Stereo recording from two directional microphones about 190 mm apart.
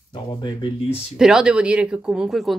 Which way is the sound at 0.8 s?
5° right (ahead or behind).